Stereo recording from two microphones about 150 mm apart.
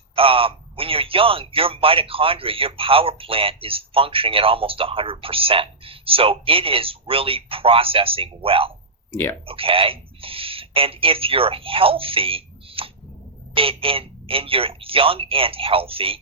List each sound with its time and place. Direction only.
0.2 s speech: 40° right (ahead or behind)